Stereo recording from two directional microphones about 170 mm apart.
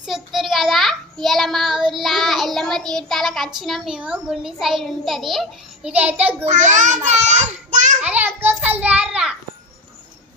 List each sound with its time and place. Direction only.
0.0 s child singing: centre (ahead or behind)
4.6 s a child's voice: centre (ahead or behind)
6.4 s a child's voice: 45° right (ahead or behind)
8.0 s a sound: 10° right (ahead or behind)
8.4 s child singing: 10° right (ahead or behind)